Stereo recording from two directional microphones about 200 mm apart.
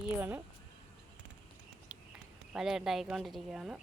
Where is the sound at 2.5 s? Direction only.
5° right (ahead or behind).